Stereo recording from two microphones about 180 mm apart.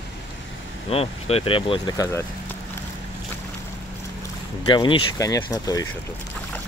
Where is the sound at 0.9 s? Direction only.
35° left (ahead or behind).